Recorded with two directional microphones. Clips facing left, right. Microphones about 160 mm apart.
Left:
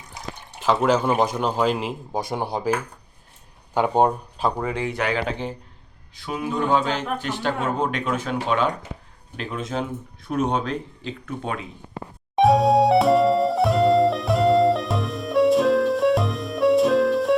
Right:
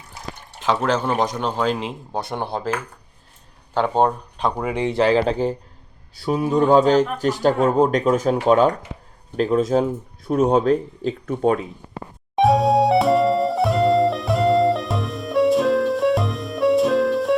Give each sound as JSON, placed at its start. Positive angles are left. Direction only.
{"t": 0.6, "sound": "speech", "side_deg": 5}
{"t": 4.5, "sound": "speech", "side_deg": -15}
{"t": 12.4, "sound": "music", "side_deg": 0}